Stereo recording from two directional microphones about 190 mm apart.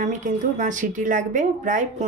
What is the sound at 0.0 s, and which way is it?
Speech, 40° right (ahead or behind).